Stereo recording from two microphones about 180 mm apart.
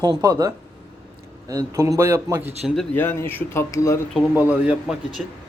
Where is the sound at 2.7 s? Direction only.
10° left (ahead or behind).